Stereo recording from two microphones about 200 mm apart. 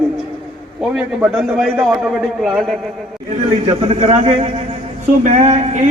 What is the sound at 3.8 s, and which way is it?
A man's voice, 30° right (ahead or behind).